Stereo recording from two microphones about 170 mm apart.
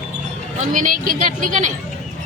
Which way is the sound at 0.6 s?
50° right (ahead or behind).